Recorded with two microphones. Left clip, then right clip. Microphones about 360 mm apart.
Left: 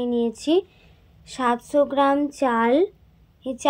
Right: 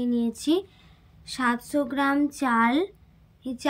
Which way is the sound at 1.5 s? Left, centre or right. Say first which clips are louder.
Left 7 dB; right.